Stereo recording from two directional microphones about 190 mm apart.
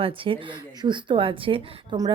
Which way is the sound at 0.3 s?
25° right (ahead or behind).